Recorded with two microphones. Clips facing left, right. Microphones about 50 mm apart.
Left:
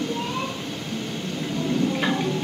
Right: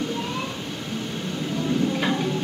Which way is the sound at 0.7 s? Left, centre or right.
Centre.